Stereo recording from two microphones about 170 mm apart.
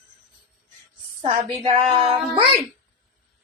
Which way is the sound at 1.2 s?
35° right (ahead or behind).